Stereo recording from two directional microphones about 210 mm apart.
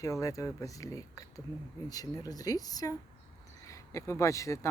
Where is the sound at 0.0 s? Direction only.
15° left (ahead or behind).